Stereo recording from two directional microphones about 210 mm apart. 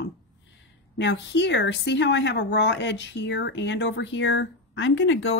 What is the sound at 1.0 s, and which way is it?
A woman's voice, 55° left (ahead or behind).